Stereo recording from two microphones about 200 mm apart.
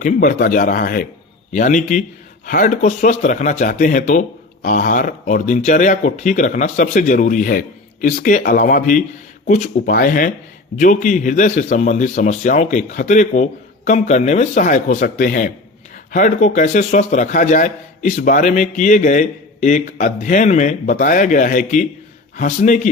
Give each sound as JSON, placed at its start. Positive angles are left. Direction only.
{"t": 0.0, "sound": "speech", "side_deg": 40}